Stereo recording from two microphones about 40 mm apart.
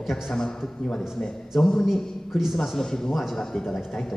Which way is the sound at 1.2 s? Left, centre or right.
Left.